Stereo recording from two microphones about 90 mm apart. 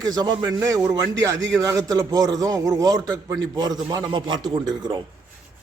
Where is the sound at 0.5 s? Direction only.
35° right (ahead or behind).